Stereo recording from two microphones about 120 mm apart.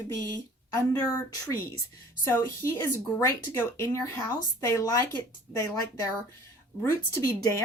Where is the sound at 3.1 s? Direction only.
25° left (ahead or behind).